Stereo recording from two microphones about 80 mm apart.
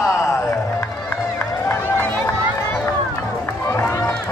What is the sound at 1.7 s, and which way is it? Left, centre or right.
Run, left.